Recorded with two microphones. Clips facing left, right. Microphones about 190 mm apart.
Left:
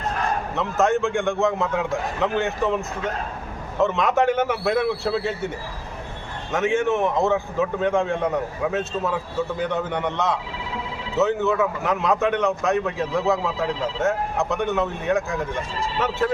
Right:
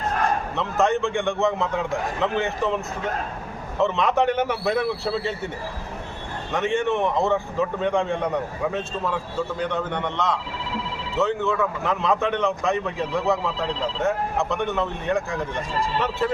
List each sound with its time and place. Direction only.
0.5 s a man's voice: centre (ahead or behind)
6.5 s a man's voice: centre (ahead or behind)